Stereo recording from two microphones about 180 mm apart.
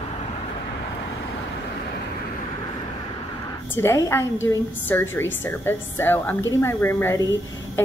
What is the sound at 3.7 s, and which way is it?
A woman's voice, 15° left (ahead or behind).